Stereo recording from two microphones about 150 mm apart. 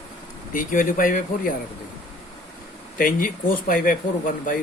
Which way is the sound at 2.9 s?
65° left (ahead or behind).